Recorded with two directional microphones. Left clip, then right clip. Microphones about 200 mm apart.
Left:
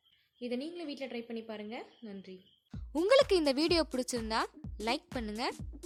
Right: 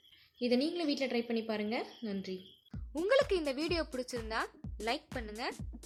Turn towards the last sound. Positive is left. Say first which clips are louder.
# left 3 dB
turn(degrees=50)  # may be behind; listen again after turning